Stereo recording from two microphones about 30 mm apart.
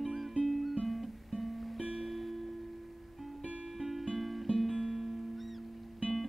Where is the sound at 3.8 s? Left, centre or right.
Centre.